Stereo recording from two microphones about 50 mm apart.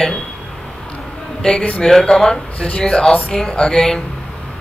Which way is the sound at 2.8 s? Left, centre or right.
Centre.